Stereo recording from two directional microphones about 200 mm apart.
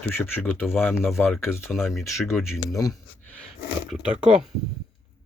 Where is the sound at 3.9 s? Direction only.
Centre (ahead or behind).